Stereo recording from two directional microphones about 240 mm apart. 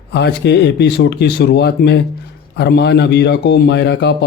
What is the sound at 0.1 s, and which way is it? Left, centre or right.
A man's voice, left.